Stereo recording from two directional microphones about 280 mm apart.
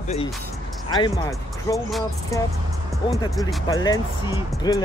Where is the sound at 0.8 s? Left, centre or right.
Centre.